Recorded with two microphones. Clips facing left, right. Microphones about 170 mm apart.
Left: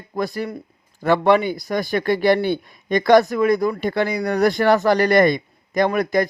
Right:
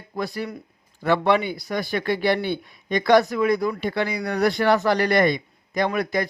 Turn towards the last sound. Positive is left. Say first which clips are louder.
# left 5 dB
turn(degrees=45)  # may be behind; listen again after turning